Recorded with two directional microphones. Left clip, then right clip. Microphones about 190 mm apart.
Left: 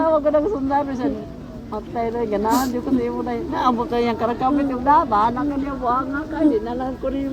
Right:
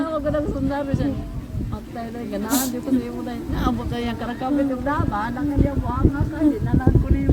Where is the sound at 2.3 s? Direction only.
55° right (ahead or behind).